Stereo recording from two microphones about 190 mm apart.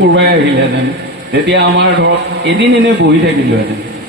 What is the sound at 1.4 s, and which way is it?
A man's voice, 65° right (ahead or behind).